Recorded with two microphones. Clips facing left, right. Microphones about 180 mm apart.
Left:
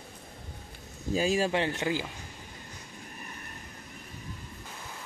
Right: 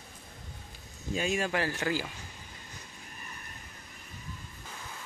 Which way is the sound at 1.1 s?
35° left (ahead or behind).